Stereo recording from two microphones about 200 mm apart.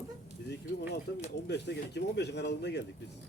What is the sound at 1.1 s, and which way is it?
Speech, 55° left (ahead or behind).